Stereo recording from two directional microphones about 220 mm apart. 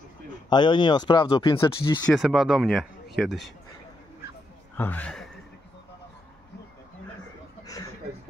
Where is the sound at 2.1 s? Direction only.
Centre (ahead or behind).